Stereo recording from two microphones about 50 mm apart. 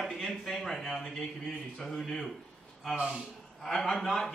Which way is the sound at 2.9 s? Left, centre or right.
Centre.